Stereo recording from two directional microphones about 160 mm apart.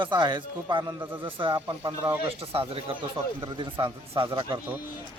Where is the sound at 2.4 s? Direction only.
35° right (ahead or behind).